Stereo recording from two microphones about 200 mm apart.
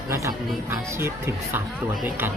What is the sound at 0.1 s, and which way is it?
Speech, 15° right (ahead or behind).